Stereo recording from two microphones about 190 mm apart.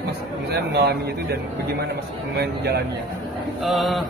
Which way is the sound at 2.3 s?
60° right (ahead or behind).